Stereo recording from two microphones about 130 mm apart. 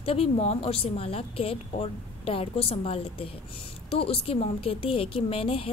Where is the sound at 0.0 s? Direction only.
50° left (ahead or behind).